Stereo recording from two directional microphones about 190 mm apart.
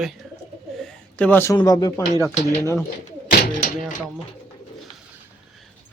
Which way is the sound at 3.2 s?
50° left (ahead or behind).